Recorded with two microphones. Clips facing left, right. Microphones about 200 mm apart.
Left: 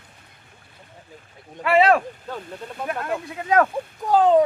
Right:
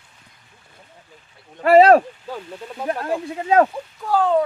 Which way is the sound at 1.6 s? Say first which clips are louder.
Right 6 dB; 40° right (ahead or behind).